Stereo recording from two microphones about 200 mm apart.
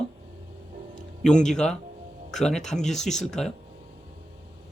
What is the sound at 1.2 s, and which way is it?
A man's voice, 5° left (ahead or behind).